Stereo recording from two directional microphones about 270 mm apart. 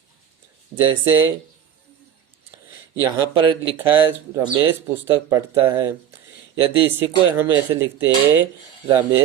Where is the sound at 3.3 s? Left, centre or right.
Centre.